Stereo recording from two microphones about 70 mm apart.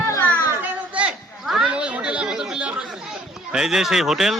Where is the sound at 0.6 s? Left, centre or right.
Centre.